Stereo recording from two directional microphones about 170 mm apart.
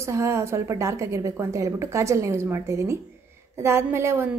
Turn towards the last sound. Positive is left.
turn(degrees=-15)  # may be behind; listen again after turning